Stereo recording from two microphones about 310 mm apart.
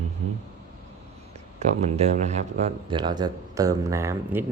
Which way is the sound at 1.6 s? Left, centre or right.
Right.